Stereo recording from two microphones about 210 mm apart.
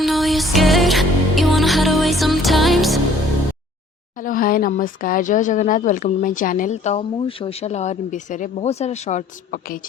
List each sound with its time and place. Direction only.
0.0 s music: centre (ahead or behind)
4.2 s speech: 40° left (ahead or behind)